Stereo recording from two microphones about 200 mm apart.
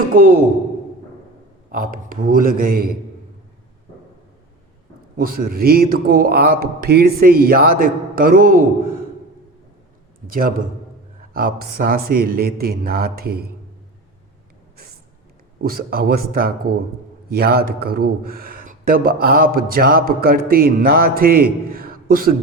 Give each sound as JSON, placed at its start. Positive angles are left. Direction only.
{"t": 1.7, "sound": "a man's voice", "side_deg": -45}
{"t": 5.1, "sound": "a man's voice", "side_deg": -45}
{"t": 10.2, "sound": "a man's voice", "side_deg": -45}
{"t": 15.6, "sound": "a man's voice", "side_deg": -45}